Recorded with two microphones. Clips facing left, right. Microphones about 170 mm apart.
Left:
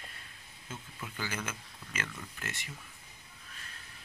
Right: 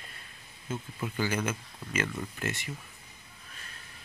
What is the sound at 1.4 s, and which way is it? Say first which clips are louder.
Speech: right 8 dB; 15° right (ahead or behind).